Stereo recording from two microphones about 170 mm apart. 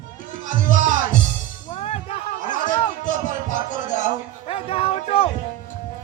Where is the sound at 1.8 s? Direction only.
35° left (ahead or behind).